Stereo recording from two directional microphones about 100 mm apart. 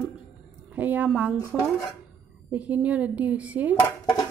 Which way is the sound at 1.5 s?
Centre (ahead or behind).